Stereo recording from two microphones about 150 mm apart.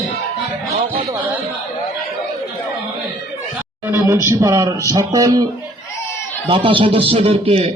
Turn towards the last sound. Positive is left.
turn(degrees=-40)  # may be behind; listen again after turning